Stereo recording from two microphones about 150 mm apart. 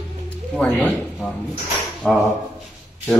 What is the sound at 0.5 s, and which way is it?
Speech, 10° left (ahead or behind).